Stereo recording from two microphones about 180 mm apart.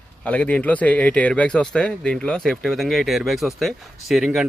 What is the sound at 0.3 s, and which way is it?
Speech, 10° left (ahead or behind).